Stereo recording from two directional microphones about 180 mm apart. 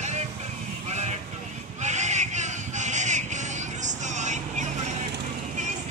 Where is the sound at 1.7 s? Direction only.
40° right (ahead or behind).